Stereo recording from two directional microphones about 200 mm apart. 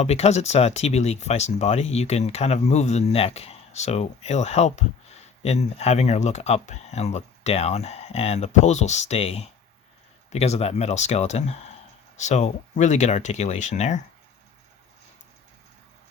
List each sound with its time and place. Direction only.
0.0 s speech: 35° left (ahead or behind)